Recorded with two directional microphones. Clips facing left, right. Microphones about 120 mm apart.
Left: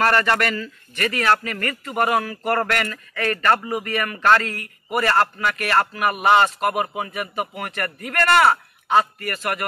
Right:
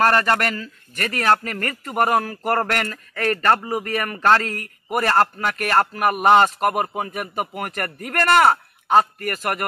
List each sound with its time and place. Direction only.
0.0 s a man's voice: 40° right (ahead or behind)